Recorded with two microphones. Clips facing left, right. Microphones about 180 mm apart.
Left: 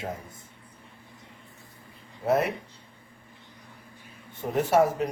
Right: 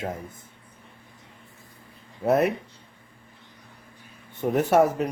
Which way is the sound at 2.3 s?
55° right (ahead or behind).